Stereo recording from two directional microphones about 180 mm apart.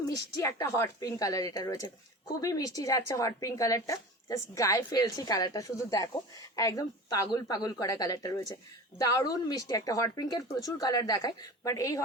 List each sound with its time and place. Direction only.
0.3 s speech: 15° left (ahead or behind)